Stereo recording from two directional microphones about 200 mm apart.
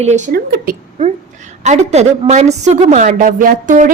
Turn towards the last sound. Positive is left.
turn(degrees=-40)  # may be behind; listen again after turning